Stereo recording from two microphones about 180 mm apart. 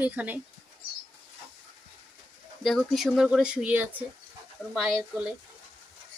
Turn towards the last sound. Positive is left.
turn(degrees=0)  # may be behind; listen again after turning